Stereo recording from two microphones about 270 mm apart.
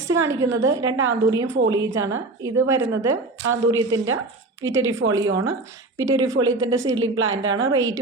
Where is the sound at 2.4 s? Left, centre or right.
Centre.